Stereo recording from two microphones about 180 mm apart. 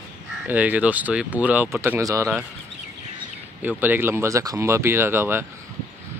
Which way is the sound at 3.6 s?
10° right (ahead or behind).